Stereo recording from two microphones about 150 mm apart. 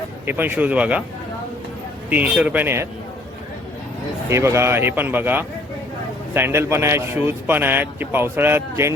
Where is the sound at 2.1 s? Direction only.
10° right (ahead or behind).